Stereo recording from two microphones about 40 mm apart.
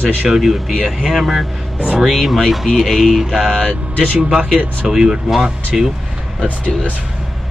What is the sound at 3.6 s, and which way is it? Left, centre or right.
Speech, right.